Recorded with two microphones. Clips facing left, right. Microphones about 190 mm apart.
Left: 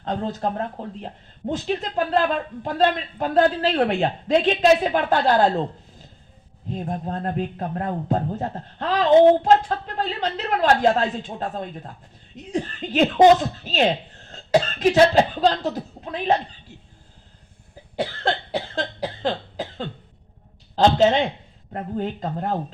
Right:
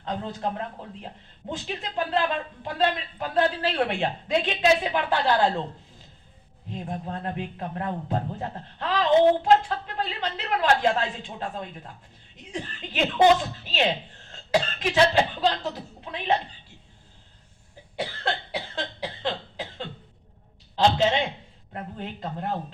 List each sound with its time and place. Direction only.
0.0 s speech: 40° left (ahead or behind)
6.7 s a man's voice: 40° left (ahead or behind)
18.2 s cough: 45° left (ahead or behind)
20.7 s speech: 45° left (ahead or behind)